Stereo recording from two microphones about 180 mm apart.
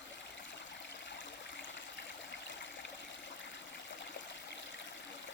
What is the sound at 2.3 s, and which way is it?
Stream, 80° left.